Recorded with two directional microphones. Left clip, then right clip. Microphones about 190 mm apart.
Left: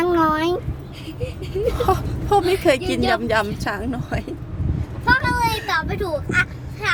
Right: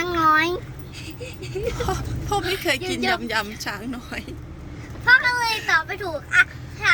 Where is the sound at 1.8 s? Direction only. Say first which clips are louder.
Left 7 dB; 55° left (ahead or behind).